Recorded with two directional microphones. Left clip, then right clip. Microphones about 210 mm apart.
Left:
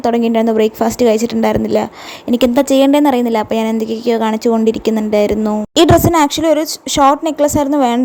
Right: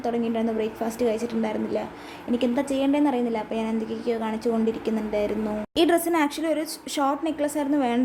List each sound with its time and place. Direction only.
0.0 s a woman's voice: 40° left (ahead or behind)